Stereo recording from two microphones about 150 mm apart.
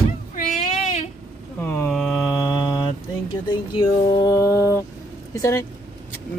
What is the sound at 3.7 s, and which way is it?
A child's voice, 30° left (ahead or behind).